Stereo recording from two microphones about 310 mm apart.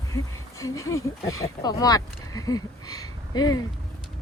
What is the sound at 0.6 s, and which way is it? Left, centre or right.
Speech, centre.